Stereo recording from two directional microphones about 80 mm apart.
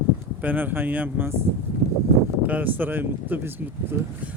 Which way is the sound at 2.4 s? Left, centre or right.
Right.